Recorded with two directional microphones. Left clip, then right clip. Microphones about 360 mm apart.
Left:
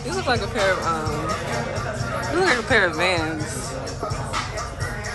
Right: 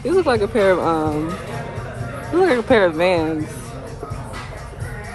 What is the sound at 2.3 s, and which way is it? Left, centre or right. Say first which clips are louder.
Speech: right 4 dB; centre.